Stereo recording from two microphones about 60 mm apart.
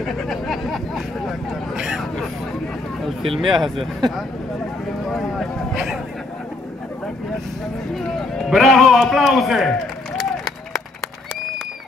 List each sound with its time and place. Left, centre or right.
0.0 s speech: centre
3.2 s a man's voice: centre
5.0 s a sound: centre
7.9 s a man's voice: centre